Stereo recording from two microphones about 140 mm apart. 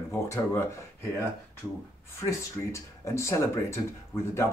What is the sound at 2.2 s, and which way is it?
Speech, 20° left (ahead or behind).